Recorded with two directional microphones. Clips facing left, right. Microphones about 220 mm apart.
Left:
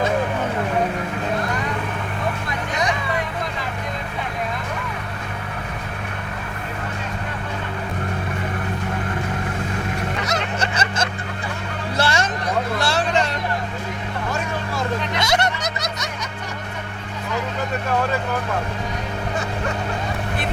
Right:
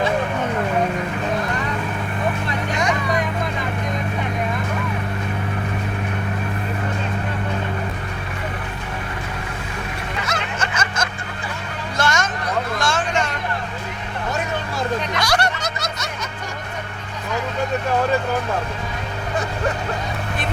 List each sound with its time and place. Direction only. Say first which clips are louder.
10.2 s snicker: left 2 dB; 40° left (ahead or behind)
11.9 s a sound: even; 30° left (ahead or behind)
15.2 s music: even; 20° left (ahead or behind)